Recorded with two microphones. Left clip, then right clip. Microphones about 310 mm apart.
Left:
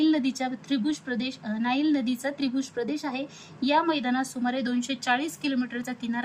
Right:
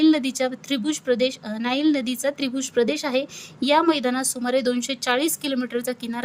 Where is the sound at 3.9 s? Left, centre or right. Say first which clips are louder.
Right 4 dB; right.